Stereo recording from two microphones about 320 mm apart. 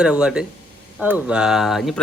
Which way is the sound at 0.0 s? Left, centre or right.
Centre.